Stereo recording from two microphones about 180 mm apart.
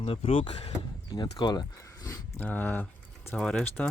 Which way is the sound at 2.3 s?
10° left (ahead or behind).